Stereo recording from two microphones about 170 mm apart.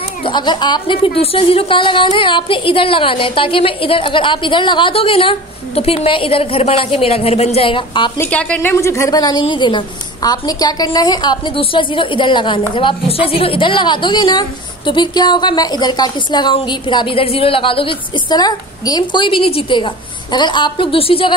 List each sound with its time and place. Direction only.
0.2 s a woman's voice: 25° left (ahead or behind)
8.2 s speech: 10° left (ahead or behind); by 21.4 s 30° left (ahead or behind)